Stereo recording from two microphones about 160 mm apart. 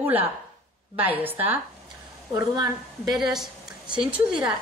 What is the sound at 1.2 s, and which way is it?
Speech, 10° right (ahead or behind).